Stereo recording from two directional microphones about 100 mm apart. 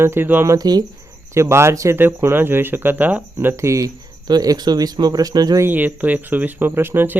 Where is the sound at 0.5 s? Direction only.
40° right (ahead or behind).